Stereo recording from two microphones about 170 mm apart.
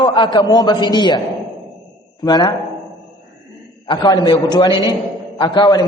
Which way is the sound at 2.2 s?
25° left (ahead or behind).